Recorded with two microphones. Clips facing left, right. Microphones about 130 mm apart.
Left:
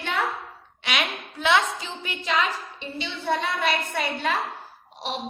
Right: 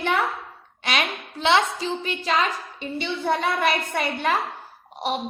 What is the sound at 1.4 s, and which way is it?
A woman's voice, 25° right (ahead or behind).